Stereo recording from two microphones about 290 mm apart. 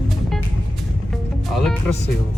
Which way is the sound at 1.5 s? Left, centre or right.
Centre.